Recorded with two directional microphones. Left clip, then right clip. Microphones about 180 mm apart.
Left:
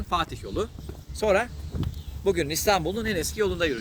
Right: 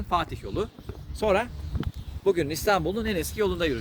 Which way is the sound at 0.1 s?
30° right (ahead or behind).